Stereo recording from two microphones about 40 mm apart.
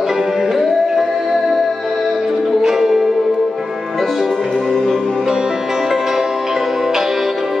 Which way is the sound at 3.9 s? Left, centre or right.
Centre.